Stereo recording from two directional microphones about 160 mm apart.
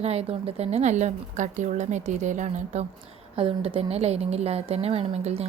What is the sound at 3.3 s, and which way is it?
Speech, 35° right (ahead or behind).